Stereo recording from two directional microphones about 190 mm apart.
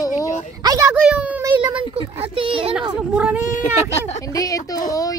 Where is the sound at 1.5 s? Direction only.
25° right (ahead or behind).